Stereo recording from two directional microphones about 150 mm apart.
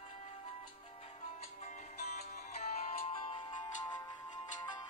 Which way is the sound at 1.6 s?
50° left (ahead or behind).